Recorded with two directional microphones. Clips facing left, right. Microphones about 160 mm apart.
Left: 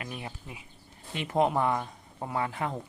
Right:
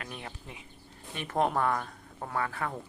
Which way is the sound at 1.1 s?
15° left (ahead or behind).